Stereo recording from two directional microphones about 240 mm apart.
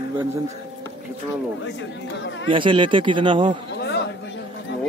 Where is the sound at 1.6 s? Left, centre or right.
Left.